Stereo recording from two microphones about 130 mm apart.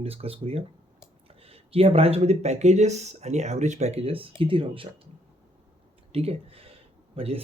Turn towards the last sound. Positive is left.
turn(degrees=-50)  # may be behind; listen again after turning